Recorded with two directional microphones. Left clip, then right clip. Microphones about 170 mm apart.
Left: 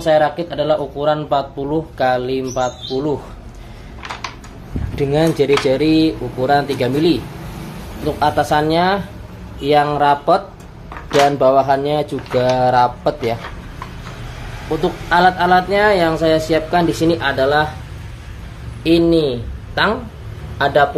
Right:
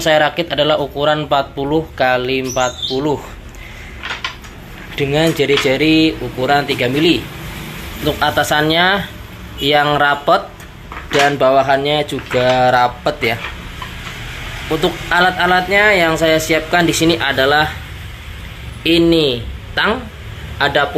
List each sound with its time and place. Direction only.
0.0 s speech: 5° right (ahead or behind)
4.9 s speech: 15° left (ahead or behind)
8.0 s speech: centre (ahead or behind)
11.2 s speech: 10° left (ahead or behind)
14.8 s speech: 10° left (ahead or behind)
18.8 s a man's voice: 5° left (ahead or behind)